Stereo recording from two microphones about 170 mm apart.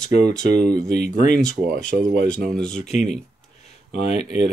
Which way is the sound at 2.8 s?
40° left (ahead or behind).